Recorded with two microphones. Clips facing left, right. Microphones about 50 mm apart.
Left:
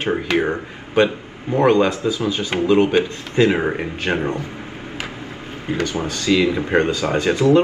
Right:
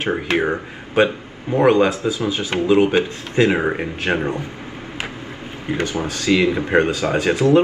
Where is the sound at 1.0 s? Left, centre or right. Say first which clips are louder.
Even; centre.